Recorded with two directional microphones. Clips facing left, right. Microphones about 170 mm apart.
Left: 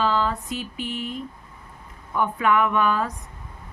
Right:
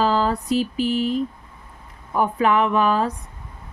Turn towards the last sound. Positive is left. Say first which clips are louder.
# right 3 dB
turn(degrees=-30)  # may be behind; listen again after turning